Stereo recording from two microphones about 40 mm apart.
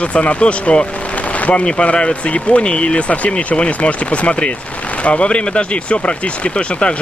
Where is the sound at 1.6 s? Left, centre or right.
Left.